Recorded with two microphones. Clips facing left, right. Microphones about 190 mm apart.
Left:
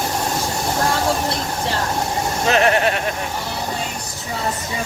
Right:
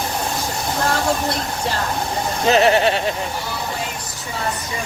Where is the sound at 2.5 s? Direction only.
30° right (ahead or behind).